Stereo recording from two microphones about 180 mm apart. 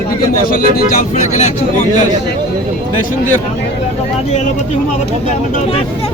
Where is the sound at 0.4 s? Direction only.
55° left (ahead or behind).